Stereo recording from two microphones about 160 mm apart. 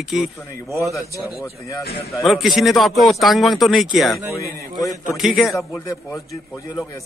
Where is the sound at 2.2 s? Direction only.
Centre (ahead or behind).